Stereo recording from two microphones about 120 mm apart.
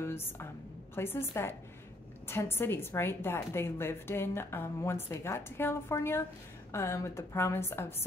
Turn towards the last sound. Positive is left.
turn(degrees=20)  # may be behind; listen again after turning